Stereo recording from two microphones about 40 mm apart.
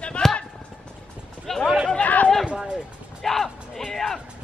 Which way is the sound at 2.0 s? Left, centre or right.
Left.